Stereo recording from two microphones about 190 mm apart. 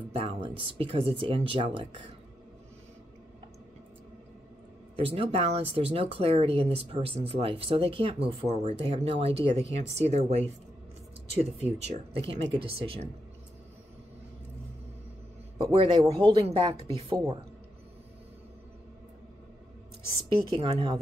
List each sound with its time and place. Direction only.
0.2 s speech: 30° right (ahead or behind)
4.9 s speech: 30° right (ahead or behind)
15.7 s speech: 25° right (ahead or behind)
20.2 s speech: 30° right (ahead or behind)